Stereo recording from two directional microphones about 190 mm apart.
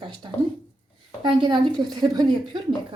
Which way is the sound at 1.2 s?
25° right (ahead or behind).